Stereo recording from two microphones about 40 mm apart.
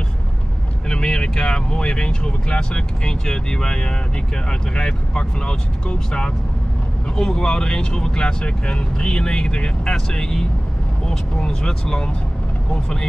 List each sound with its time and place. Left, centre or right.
0.8 s speech: centre